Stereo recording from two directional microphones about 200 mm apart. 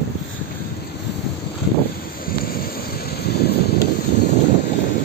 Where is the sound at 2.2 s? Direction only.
50° left (ahead or behind).